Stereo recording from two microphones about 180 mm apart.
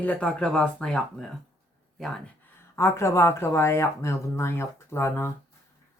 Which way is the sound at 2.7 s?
15° left (ahead or behind).